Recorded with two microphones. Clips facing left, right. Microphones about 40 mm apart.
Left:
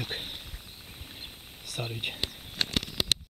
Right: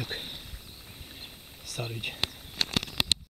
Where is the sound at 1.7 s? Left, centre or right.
Centre.